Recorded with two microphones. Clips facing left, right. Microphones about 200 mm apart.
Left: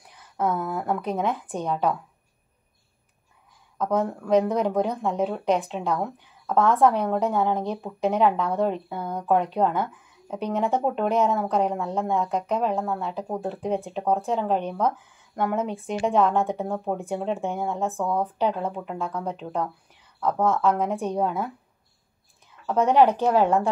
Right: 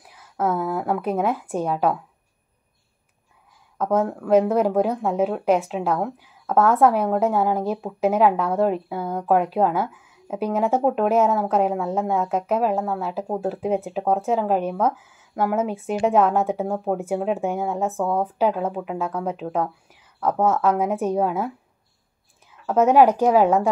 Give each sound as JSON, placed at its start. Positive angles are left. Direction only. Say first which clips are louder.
{"t": 0.0, "sound": "a sound", "louder": "right 2 dB", "side_deg": -5}
{"t": 0.7, "sound": "speech", "louder": "right 3 dB", "side_deg": -5}
{"t": 4.3, "sound": "speech", "louder": "right 4 dB", "side_deg": -5}
{"t": 17.9, "sound": "speech", "louder": "right 3 dB", "side_deg": -30}
{"t": 18.2, "sound": "speech", "louder": "right 3 dB", "side_deg": -5}
{"t": 20.4, "sound": "speech", "louder": "right 2 dB", "side_deg": -10}
{"t": 22.7, "sound": "speech", "louder": "right 3 dB", "side_deg": -5}